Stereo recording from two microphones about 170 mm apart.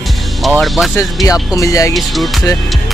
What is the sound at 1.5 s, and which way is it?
Speech, 20° left (ahead or behind).